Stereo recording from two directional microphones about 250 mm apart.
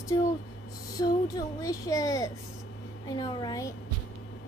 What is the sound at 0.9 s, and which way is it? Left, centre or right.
Speech, centre.